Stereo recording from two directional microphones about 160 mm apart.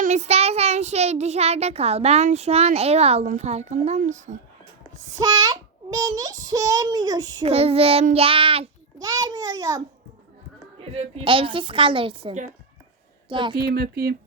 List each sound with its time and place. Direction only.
0.0 s child singing: 45° right (ahead or behind)
5.1 s a child's voice: 25° right (ahead or behind)
7.4 s child singing: 40° right (ahead or behind)
9.0 s a child's voice: 25° right (ahead or behind)
10.9 s child singing: 35° right (ahead or behind)
13.2 s a woman's voice: 30° right (ahead or behind)
13.6 s speech: 80° right